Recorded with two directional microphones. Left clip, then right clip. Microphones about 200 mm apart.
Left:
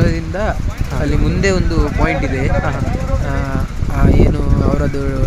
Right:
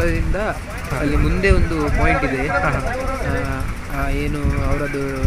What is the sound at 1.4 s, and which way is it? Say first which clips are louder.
Speech: left 2 dB; 55° left (ahead or behind).